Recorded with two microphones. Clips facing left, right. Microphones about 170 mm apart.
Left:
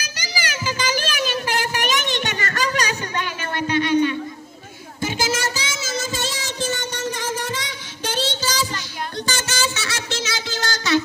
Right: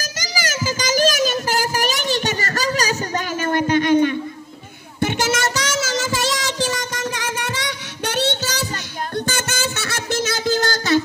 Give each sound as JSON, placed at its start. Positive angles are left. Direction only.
{"t": 0.0, "sound": "child singing", "side_deg": -40}
{"t": 5.0, "sound": "child singing", "side_deg": -70}
{"t": 9.1, "sound": "a sound", "side_deg": -55}